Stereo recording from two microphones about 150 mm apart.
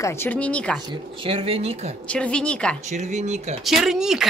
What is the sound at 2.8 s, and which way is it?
Speech, 50° right (ahead or behind).